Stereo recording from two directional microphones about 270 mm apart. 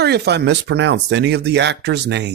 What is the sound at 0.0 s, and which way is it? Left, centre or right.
Speech, right.